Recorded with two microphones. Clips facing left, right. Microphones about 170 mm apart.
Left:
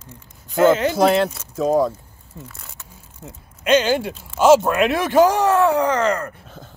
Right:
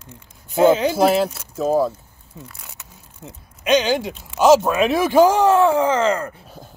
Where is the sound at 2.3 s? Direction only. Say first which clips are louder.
Left 1 dB; centre (ahead or behind).